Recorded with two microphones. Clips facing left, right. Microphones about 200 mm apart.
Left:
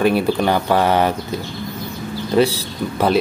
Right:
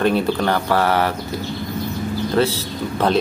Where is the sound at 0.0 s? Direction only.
10° left (ahead or behind).